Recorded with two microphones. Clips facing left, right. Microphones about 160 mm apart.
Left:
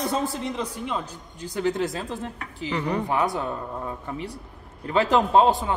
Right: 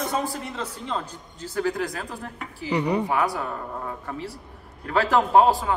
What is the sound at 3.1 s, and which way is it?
Speech, 20° left (ahead or behind).